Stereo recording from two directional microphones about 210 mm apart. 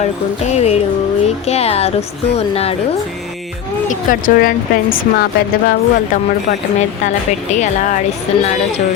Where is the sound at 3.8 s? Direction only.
40° left (ahead or behind).